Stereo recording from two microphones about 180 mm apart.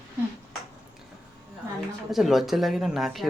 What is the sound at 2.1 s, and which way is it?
Speech, centre (ahead or behind).